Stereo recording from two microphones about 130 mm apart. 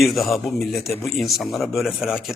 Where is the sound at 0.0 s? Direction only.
Centre (ahead or behind).